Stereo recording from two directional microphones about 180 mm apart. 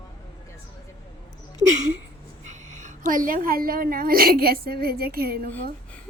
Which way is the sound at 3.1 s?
50° right (ahead or behind).